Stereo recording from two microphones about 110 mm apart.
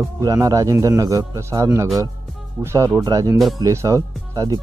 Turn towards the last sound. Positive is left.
turn(degrees=-30)  # may be behind; listen again after turning